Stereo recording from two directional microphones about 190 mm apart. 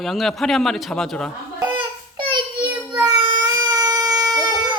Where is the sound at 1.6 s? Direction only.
25° right (ahead or behind).